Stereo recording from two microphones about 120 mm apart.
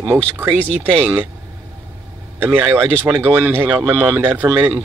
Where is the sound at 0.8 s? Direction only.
15° right (ahead or behind).